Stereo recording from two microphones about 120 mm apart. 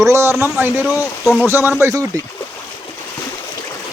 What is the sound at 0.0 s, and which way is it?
Speech, 25° right (ahead or behind).